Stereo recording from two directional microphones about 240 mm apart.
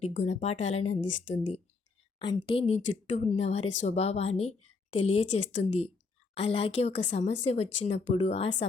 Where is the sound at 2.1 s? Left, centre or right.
Left.